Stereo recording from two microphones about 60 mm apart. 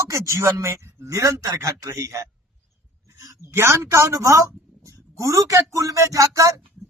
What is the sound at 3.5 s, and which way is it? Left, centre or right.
A woman's voice, right.